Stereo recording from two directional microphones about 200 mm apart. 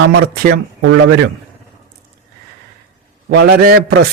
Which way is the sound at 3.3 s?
50° right (ahead or behind).